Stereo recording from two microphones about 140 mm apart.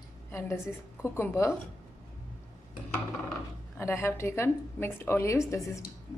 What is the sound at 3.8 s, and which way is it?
A woman's voice, 20° left (ahead or behind).